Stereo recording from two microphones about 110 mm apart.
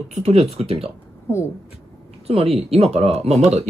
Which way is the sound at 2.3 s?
60° right (ahead or behind).